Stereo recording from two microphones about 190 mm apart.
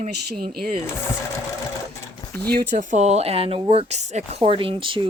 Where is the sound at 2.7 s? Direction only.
40° right (ahead or behind).